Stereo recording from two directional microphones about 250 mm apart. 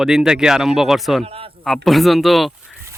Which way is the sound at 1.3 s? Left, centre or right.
Right.